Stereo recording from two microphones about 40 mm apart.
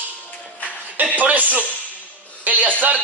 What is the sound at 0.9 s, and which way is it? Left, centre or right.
Speech, right.